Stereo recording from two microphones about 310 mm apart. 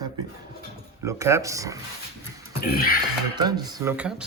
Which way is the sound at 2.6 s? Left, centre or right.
Left.